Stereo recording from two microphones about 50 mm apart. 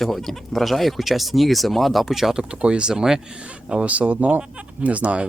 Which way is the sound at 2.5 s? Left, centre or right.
Centre.